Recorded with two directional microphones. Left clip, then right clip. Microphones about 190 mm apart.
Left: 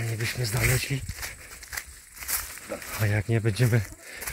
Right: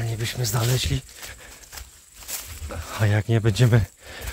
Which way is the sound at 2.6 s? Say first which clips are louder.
Right 6 dB; 30° right (ahead or behind).